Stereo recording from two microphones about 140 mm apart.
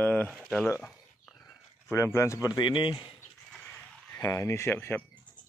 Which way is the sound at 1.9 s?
20° left (ahead or behind).